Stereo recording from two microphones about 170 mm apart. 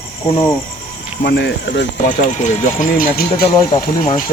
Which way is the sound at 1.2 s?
80° left.